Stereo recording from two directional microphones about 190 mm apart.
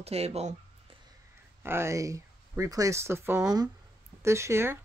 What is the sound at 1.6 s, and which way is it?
Speech, 15° right (ahead or behind).